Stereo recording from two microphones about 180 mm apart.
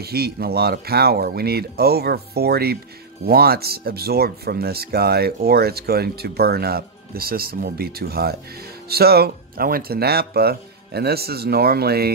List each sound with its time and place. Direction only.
0.0 s speech: 60° right (ahead or behind)